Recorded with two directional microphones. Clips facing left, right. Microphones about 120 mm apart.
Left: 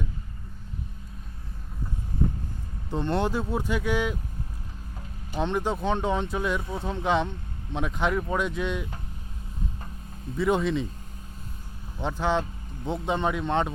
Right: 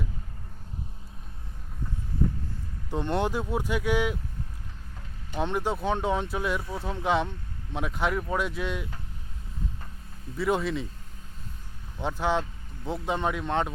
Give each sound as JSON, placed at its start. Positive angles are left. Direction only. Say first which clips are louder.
{"t": 2.9, "sound": "speech", "louder": "left 1 dB", "side_deg": -15}
{"t": 5.4, "sound": "speech", "louder": "left 1 dB", "side_deg": -10}
{"t": 6.6, "sound": "speech", "louder": "left 2 dB", "side_deg": 20}
{"t": 6.8, "sound": "speech", "louder": "left 1 dB", "side_deg": -10}
{"t": 10.3, "sound": "speech", "louder": "left 3 dB", "side_deg": -5}
{"t": 12.0, "sound": "speech", "louder": "left 1 dB", "side_deg": -10}